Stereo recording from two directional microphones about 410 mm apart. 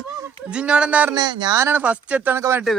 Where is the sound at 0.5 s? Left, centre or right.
Centre.